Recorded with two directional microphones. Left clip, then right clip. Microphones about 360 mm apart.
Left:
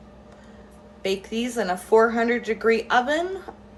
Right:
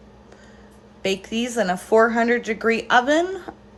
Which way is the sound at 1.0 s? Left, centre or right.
Right.